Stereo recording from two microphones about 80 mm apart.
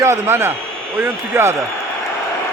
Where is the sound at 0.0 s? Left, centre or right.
Right.